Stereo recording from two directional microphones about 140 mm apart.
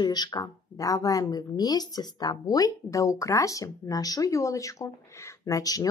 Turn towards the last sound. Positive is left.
turn(degrees=25)  # may be behind; listen again after turning